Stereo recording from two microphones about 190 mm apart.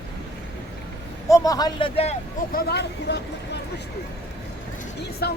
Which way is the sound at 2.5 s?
60° left (ahead or behind).